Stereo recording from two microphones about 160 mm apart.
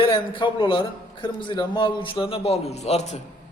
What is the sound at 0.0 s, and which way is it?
A man's voice, 30° left (ahead or behind).